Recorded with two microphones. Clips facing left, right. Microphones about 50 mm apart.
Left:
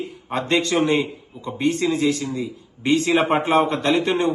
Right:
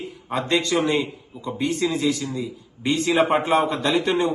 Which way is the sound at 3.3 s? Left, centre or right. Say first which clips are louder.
Left 1 dB; left.